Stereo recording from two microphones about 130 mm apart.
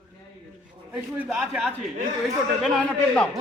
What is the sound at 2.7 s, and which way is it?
Speech, 10° left (ahead or behind).